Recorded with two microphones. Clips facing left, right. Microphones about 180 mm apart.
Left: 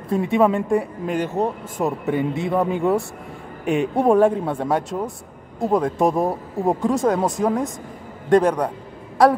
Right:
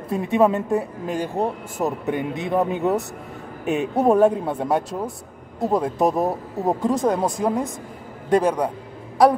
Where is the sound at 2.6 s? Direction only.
5° right (ahead or behind).